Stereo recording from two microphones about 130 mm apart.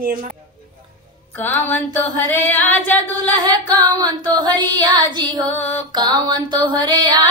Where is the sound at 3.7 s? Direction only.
30° right (ahead or behind).